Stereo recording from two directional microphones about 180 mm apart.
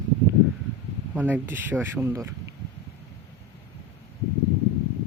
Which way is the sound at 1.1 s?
10° right (ahead or behind).